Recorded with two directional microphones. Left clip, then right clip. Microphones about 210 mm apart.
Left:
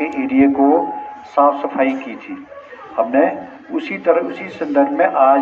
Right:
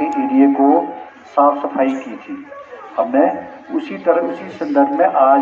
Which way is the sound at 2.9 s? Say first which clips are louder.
Even; 25° left (ahead or behind).